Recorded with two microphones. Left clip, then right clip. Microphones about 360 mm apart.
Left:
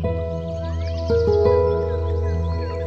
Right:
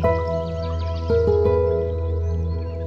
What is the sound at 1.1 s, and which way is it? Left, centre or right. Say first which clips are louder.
Music: left 1 dB; centre.